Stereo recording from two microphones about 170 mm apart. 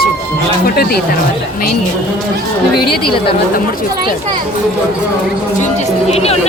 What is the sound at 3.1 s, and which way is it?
Speech, 30° left (ahead or behind).